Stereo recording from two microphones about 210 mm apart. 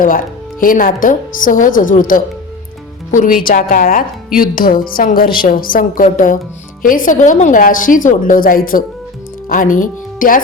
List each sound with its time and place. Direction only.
0.0 s a woman's voice: 40° left (ahead or behind)